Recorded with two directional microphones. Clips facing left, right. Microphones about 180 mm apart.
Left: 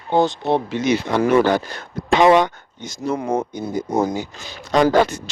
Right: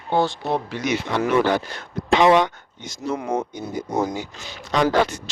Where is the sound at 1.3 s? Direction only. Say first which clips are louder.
Left 3 dB; 45° left (ahead or behind).